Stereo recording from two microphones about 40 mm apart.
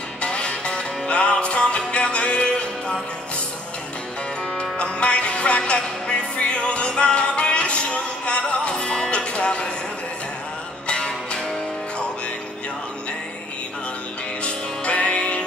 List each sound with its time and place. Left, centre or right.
0.2 s music: left
4.6 s music: left
10.9 s music: left
14.4 s music: left